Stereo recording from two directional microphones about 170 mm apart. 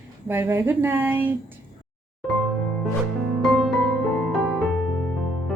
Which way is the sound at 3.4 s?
Centre (ahead or behind).